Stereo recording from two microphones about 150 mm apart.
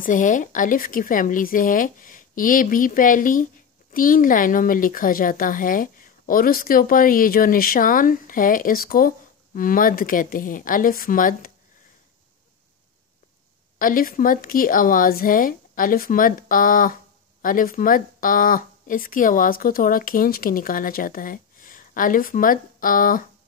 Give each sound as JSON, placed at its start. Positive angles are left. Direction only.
{"t": 0.0, "sound": "speech", "side_deg": 60}
{"t": 13.7, "sound": "speech", "side_deg": 70}